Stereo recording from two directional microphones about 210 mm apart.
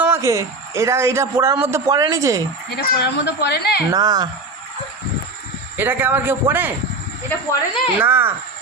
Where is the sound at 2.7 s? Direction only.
55° left (ahead or behind).